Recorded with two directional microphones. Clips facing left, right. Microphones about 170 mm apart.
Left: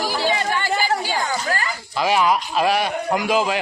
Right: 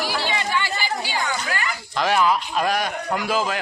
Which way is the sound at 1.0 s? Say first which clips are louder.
Left 2 dB; 40° left (ahead or behind).